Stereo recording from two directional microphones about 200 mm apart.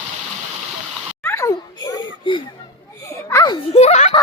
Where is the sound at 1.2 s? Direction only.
15° left (ahead or behind).